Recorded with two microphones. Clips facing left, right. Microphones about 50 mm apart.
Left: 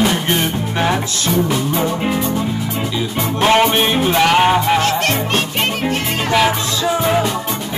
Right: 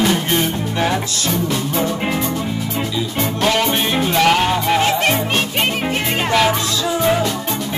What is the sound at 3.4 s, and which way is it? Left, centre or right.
Music, left.